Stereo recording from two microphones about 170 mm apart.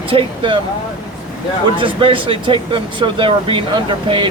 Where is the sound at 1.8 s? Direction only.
30° right (ahead or behind).